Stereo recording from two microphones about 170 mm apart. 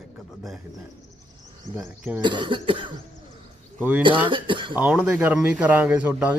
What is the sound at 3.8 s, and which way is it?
Speech, 10° right (ahead or behind).